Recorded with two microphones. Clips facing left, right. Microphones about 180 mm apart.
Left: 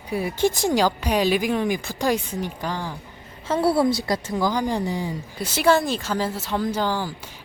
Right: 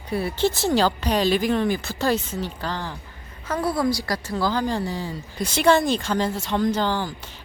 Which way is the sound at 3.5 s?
30° left (ahead or behind).